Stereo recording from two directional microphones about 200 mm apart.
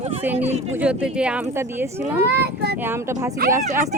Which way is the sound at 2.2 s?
55° right (ahead or behind).